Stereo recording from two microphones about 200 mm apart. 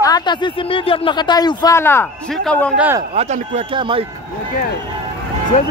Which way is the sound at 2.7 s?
10° right (ahead or behind).